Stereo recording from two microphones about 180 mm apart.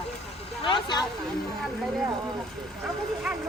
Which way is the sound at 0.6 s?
25° left (ahead or behind).